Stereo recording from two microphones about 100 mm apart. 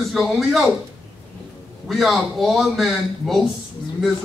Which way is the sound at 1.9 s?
Centre (ahead or behind).